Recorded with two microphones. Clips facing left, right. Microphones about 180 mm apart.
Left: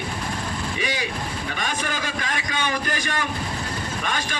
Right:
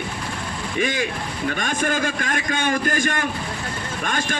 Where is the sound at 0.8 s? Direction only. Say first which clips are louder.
Right 5 dB; 50° right (ahead or behind).